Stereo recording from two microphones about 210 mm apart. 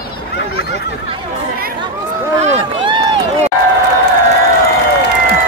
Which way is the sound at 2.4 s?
25° right (ahead or behind).